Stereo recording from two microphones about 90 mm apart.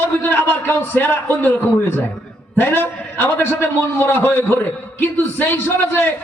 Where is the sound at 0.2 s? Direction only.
20° left (ahead or behind).